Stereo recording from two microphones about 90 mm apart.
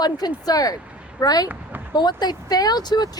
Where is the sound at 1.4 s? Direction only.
20° right (ahead or behind).